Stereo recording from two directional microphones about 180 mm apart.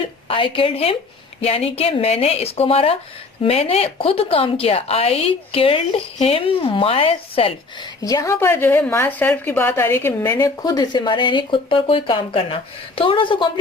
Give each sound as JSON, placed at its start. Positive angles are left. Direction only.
{"t": 0.3, "sound": "a woman's voice", "side_deg": 30}
{"t": 8.0, "sound": "a woman's voice", "side_deg": 20}